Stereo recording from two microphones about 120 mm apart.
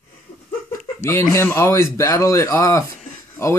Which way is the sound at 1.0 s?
20° left (ahead or behind).